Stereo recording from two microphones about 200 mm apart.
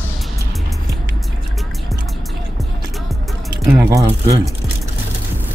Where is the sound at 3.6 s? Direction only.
15° right (ahead or behind).